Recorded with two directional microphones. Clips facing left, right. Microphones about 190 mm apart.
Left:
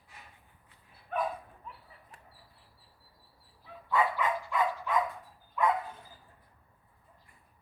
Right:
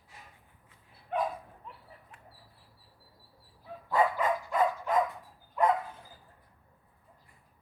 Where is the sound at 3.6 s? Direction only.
40° right (ahead or behind).